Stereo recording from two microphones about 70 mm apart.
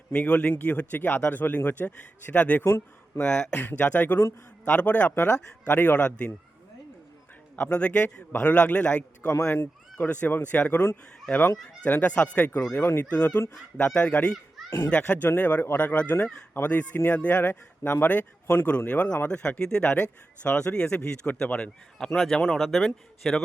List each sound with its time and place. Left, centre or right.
0.1 s speech: centre
2.6 s speech: left; by 6.3 s centre
7.6 s speech: centre
12.7 s speech: left
13.1 s a man's voice: centre
23.2 s speech: centre